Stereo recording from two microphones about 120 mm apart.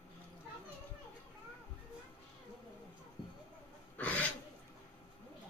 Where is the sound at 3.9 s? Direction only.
10° left (ahead or behind).